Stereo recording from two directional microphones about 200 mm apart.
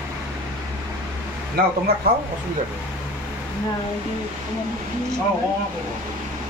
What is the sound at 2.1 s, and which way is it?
Speech, 50° right (ahead or behind).